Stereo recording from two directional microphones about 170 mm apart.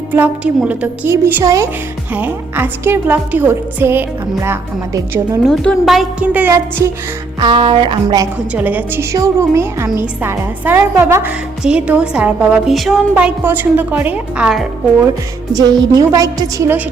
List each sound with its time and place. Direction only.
0.1 s a woman's voice: 10° right (ahead or behind)
5.4 s a woman's voice: centre (ahead or behind); by 6.9 s 15° right (ahead or behind)
7.3 s a woman's voice: 30° right (ahead or behind)
8.5 s a woman's voice: 10° right (ahead or behind)
15.5 s a woman's voice: 20° right (ahead or behind)